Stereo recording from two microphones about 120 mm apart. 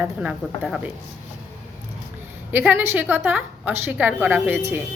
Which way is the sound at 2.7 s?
20° right (ahead or behind).